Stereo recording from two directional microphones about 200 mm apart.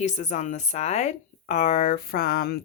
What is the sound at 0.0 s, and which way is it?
Speech, 35° left (ahead or behind).